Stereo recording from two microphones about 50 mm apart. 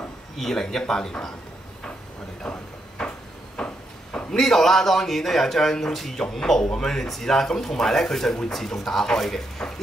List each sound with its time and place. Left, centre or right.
0.4 s speech: centre
2.4 s a sound: left
3.5 s a man's voice: left